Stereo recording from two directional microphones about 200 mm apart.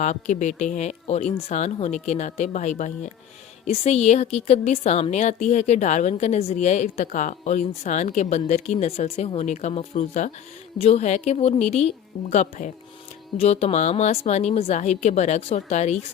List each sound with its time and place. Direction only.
0.0 s a woman's voice: 35° left (ahead or behind)